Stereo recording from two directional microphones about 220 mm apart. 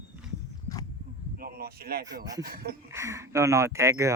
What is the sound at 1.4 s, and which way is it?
Speech, 45° right (ahead or behind).